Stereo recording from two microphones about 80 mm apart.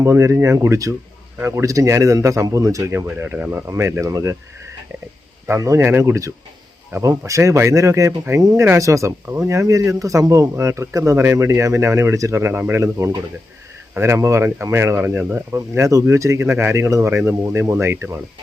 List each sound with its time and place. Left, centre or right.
0.0 s speech: right
1.4 s speech: right
1.6 s speech: right
3.3 s speech: centre
3.7 s speech: right
5.5 s speech: right
12.8 s speech: right